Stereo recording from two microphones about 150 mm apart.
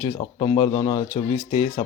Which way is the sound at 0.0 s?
35° left (ahead or behind).